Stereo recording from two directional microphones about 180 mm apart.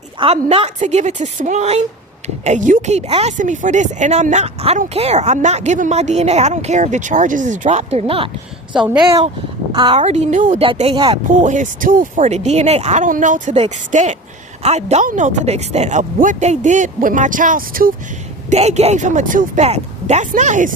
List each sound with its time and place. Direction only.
0.2 s a woman's voice: 35° right (ahead or behind)
8.7 s a woman's voice: 5° right (ahead or behind)
9.7 s speech: 25° right (ahead or behind)
10.0 s a woman's voice: 40° right (ahead or behind)
10.6 s a woman's voice: 30° right (ahead or behind)
11.3 s a woman's voice: 45° right (ahead or behind)
18.5 s a woman's voice: 35° right (ahead or behind)